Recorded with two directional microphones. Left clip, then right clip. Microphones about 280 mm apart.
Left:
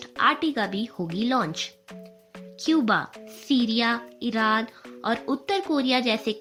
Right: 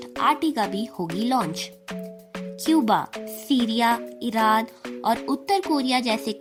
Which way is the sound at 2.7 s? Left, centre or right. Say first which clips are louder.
Right 2 dB; right.